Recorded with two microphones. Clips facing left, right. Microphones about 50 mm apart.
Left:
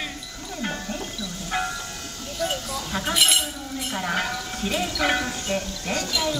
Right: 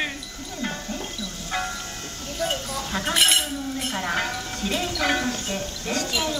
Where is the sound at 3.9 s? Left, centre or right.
Centre.